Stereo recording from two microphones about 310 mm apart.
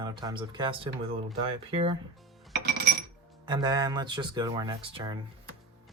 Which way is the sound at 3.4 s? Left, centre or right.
Centre.